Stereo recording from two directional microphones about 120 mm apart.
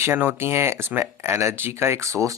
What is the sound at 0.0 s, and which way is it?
Speech, 20° right (ahead or behind).